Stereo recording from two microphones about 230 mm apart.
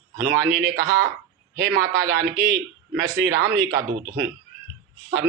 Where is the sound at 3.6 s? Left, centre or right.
Centre.